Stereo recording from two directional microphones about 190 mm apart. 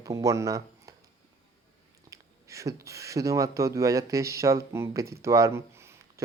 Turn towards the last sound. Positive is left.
turn(degrees=-15)  # may be behind; listen again after turning